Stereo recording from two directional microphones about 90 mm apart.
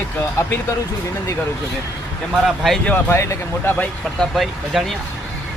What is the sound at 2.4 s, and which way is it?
Speech, centre (ahead or behind).